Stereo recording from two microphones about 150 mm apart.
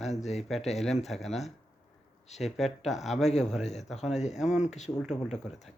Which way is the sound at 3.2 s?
45° left (ahead or behind).